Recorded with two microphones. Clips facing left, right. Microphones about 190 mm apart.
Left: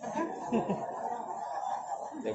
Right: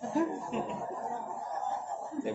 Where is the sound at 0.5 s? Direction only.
50° left (ahead or behind).